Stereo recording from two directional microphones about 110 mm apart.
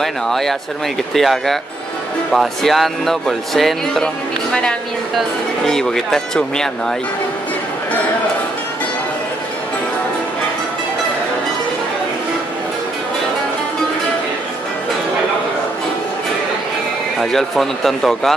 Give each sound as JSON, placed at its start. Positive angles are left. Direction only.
{"t": 0.0, "sound": "speech", "side_deg": 5}
{"t": 17.2, "sound": "speech", "side_deg": 5}